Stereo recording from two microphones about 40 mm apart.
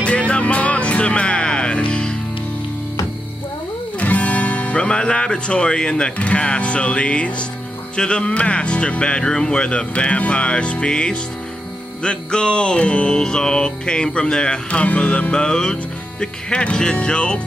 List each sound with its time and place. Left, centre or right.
0.0 s music: left
4.0 s music: left
15.3 s music: centre